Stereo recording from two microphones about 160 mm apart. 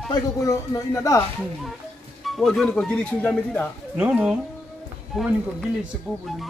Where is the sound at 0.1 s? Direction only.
20° left (ahead or behind).